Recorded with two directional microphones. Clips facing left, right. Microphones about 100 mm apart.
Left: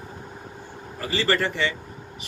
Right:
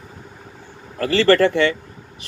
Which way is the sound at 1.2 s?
65° right (ahead or behind).